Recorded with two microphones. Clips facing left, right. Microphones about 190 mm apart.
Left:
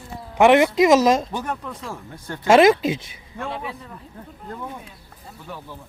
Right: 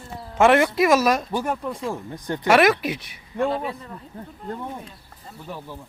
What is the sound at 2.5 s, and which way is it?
Speech, 25° left (ahead or behind).